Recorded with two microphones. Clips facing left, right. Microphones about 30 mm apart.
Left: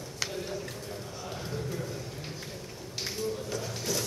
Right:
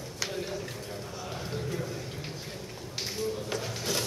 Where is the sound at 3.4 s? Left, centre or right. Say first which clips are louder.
Right 1 dB; right.